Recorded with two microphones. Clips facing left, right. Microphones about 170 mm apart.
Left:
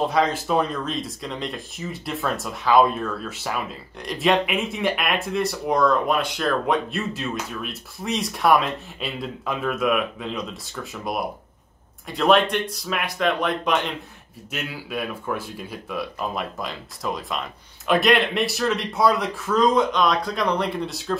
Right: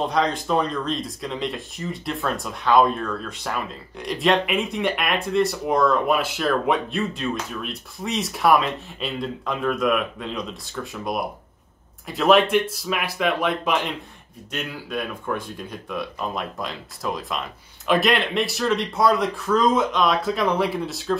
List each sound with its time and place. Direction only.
0.0 s speech: 5° left (ahead or behind)